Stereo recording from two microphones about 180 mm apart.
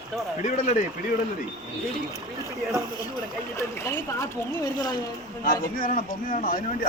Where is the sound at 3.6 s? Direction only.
15° left (ahead or behind).